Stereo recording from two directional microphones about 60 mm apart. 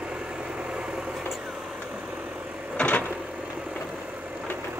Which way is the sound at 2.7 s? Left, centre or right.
Left.